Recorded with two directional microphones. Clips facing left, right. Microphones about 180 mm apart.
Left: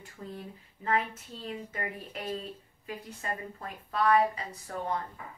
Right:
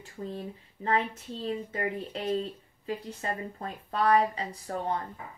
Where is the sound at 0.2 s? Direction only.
30° right (ahead or behind).